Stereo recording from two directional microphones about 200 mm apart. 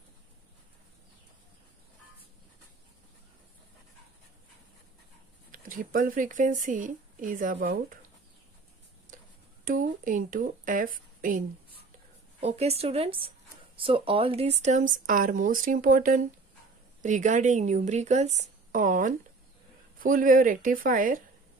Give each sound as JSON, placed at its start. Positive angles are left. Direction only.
{"t": 5.5, "sound": "speech", "side_deg": -45}
{"t": 9.1, "sound": "tick-tock", "side_deg": -40}
{"t": 9.7, "sound": "speech", "side_deg": -40}